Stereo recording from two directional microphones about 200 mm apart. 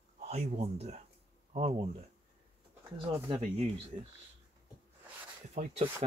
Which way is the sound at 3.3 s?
30° right (ahead or behind).